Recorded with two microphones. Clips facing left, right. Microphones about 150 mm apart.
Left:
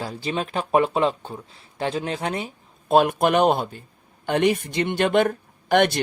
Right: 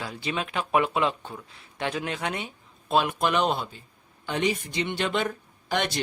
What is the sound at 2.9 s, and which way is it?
Speech, 50° left (ahead or behind).